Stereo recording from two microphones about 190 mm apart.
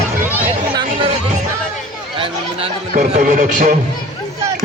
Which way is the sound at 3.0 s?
45° right (ahead or behind).